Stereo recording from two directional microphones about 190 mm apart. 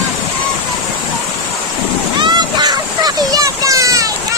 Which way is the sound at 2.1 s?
20° right (ahead or behind).